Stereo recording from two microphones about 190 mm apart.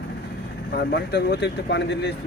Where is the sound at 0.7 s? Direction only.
60° left (ahead or behind).